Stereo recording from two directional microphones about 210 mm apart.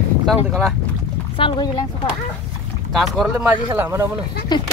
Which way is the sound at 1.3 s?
25° left (ahead or behind).